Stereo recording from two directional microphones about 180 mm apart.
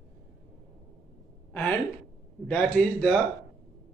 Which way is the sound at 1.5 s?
10° left (ahead or behind).